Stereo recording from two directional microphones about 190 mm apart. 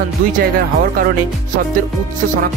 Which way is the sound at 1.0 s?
45° right (ahead or behind).